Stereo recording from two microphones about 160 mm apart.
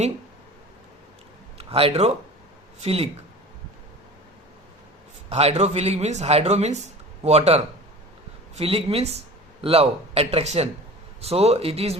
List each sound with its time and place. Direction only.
1.5 s speech: 35° right (ahead or behind)
5.3 s speech: 40° right (ahead or behind)